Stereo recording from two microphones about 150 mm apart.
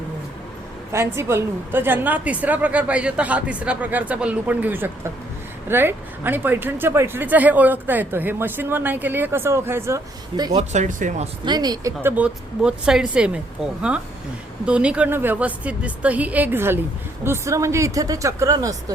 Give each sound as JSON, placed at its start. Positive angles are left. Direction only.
{"t": 0.9, "sound": "speech", "side_deg": -15}
{"t": 10.6, "sound": "speech", "side_deg": -50}
{"t": 11.4, "sound": "speech", "side_deg": -25}
{"t": 12.1, "sound": "speech", "side_deg": -5}
{"t": 14.6, "sound": "speech", "side_deg": -5}